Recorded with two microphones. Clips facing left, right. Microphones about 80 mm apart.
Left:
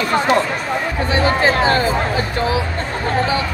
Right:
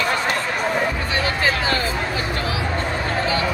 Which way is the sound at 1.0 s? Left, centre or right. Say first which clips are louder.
Left 6 dB; left.